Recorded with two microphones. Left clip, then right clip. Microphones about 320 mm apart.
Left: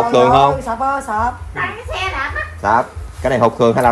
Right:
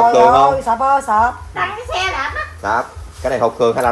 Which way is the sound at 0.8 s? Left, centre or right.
Right.